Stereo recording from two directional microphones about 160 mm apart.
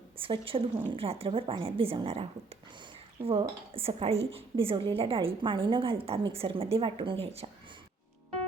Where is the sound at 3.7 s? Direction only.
35° right (ahead or behind).